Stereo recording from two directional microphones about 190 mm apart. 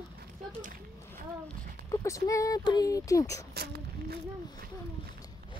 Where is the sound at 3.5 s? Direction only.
55° right (ahead or behind).